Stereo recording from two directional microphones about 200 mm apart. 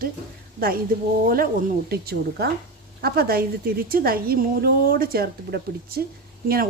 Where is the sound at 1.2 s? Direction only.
45° right (ahead or behind).